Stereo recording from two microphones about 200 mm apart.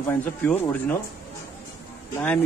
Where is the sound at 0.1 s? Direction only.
10° left (ahead or behind).